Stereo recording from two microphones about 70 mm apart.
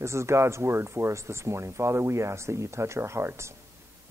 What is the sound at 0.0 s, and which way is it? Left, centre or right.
Speech, right.